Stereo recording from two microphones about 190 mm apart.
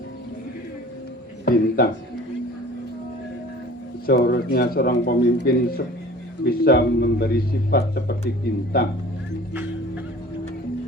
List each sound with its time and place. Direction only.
1.5 s speech: 55° left (ahead or behind)
4.0 s speech: 55° left (ahead or behind)